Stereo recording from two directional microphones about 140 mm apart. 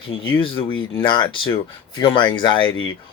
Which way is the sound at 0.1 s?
35° left (ahead or behind).